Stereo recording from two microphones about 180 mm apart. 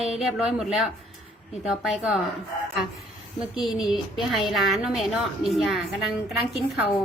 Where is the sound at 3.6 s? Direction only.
Centre (ahead or behind).